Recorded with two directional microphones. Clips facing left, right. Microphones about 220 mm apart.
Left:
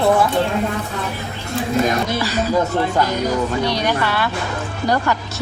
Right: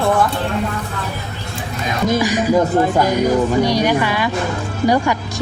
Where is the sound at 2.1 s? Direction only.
15° right (ahead or behind).